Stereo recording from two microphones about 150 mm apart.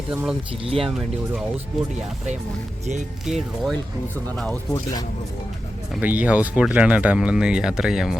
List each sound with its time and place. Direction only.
0.1 s speech: 10° right (ahead or behind)
0.6 s speech: 40° right (ahead or behind)
0.9 s speech: 5° right (ahead or behind)
3.2 s speech: centre (ahead or behind)
4.7 s speech: 25° left (ahead or behind)
6.0 s speech: 10° right (ahead or behind)